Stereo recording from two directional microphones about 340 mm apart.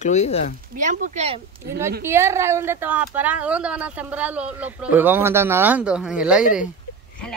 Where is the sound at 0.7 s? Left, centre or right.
Right.